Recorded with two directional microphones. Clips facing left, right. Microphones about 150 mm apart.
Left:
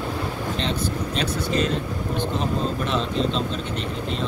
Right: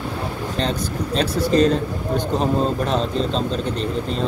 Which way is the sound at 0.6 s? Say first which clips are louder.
Right 4 dB; 40° right (ahead or behind).